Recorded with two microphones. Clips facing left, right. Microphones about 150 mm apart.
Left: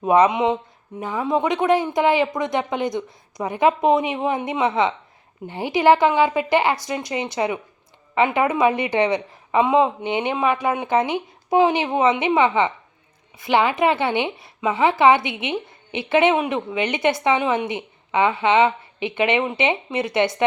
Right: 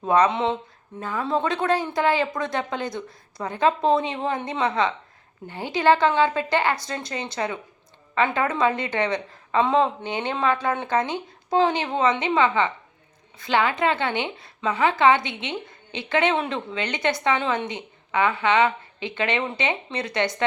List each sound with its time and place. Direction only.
0.0 s a woman's voice: 15° left (ahead or behind)